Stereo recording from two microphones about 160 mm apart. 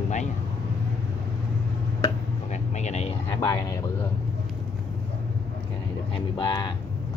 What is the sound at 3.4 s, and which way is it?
Speech, 25° left (ahead or behind).